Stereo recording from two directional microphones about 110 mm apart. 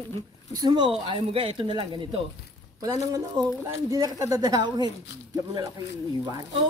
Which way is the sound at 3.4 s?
40° right (ahead or behind).